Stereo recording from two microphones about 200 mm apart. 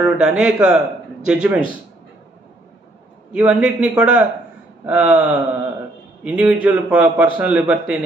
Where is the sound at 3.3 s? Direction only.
5° right (ahead or behind).